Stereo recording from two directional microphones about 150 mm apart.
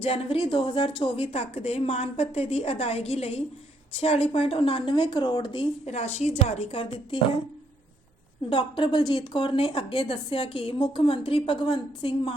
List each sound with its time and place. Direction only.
0.0 s a woman's voice: 35° left (ahead or behind)
5.9 s a woman's voice: 50° left (ahead or behind)
8.4 s a woman's voice: 35° left (ahead or behind)